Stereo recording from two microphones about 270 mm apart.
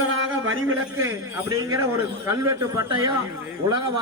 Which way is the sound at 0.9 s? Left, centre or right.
Centre.